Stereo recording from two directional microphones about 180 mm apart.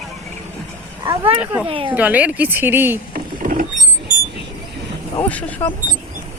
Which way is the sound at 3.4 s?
50° right (ahead or behind).